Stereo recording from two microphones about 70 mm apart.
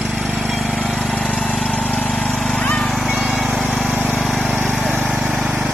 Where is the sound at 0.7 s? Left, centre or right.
Centre.